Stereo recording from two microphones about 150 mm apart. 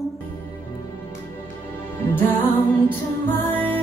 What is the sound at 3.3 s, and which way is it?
Music, 15° left (ahead or behind).